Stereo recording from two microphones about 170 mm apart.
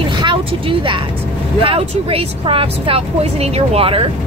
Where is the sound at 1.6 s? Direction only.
35° right (ahead or behind).